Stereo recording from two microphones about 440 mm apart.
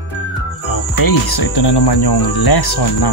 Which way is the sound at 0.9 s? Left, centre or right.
Left.